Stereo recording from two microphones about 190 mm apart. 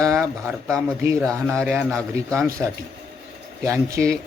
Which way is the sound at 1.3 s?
15° right (ahead or behind).